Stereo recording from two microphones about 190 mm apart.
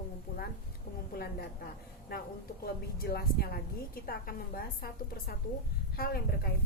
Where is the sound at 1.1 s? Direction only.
55° left (ahead or behind).